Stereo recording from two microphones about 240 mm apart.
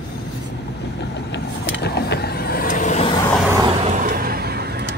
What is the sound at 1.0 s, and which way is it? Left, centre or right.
Vehicle, left.